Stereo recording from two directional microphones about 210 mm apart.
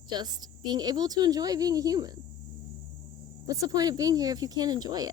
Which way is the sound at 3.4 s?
15° right (ahead or behind).